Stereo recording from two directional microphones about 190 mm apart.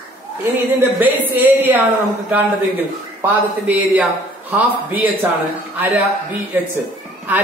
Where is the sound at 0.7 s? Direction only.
10° right (ahead or behind).